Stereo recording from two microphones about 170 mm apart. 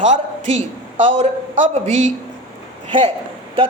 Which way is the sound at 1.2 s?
40° right (ahead or behind).